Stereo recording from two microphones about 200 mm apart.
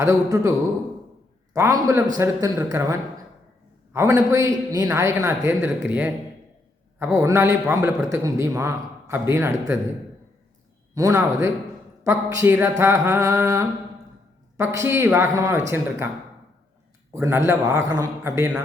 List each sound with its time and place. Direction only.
0.0 s a man's voice: 15° right (ahead or behind)
1.5 s a man's voice: 15° right (ahead or behind)
10.9 s a man's voice: 15° right (ahead or behind)
17.2 s a man's voice: 15° right (ahead or behind)